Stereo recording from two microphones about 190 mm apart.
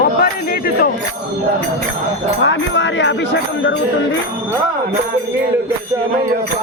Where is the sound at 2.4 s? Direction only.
70° left (ahead or behind).